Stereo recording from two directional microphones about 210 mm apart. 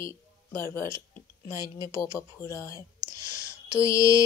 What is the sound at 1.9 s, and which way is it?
Speech, 15° left (ahead or behind).